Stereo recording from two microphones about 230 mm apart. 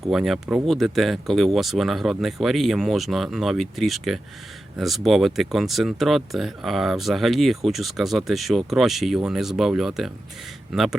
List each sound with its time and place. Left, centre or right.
0.1 s speech: centre